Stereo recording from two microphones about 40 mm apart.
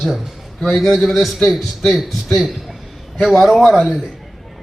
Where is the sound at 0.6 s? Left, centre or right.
Centre.